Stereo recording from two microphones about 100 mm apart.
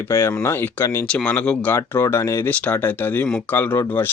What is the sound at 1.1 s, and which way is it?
Speech, 10° left (ahead or behind).